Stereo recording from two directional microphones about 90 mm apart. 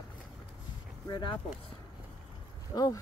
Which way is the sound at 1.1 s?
65° left (ahead or behind).